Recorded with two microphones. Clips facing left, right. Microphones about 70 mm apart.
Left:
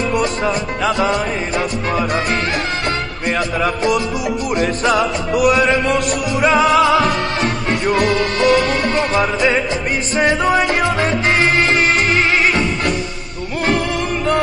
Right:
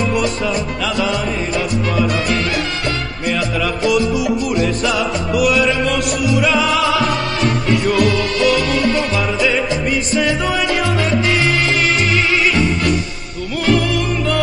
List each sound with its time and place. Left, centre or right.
0.1 s music: left
3.3 s music: left